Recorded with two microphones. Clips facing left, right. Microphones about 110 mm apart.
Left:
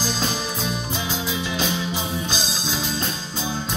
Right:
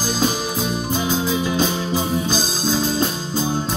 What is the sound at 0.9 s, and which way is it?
Music, 40° right (ahead or behind).